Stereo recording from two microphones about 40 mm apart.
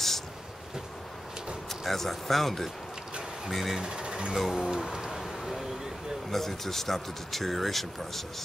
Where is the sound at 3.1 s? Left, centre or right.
Centre.